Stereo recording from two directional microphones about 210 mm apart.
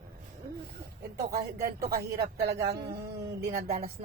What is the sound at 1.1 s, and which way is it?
Speech, 50° right (ahead or behind).